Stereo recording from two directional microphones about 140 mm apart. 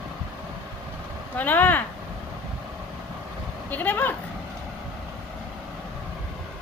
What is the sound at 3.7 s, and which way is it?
Speech, 10° left (ahead or behind).